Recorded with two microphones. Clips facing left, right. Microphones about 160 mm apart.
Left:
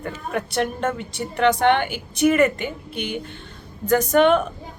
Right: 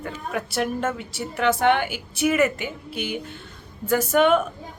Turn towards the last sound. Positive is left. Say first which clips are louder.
# left 2 dB
turn(degrees=-5)  # may be behind; listen again after turning